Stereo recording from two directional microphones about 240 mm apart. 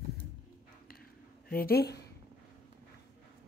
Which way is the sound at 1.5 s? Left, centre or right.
Left.